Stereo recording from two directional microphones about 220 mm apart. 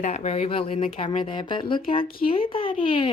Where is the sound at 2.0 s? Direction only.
40° left (ahead or behind).